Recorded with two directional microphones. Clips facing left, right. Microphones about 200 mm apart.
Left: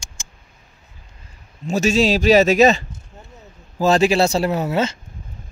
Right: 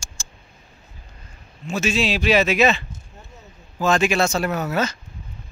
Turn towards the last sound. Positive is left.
turn(degrees=25)  # may be behind; listen again after turning